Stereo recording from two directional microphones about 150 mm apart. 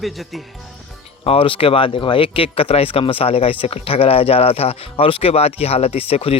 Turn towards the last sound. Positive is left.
turn(degrees=40)  # may be behind; listen again after turning